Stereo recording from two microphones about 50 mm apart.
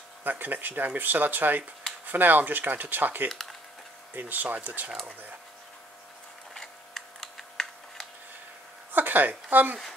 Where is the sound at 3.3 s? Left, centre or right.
Centre.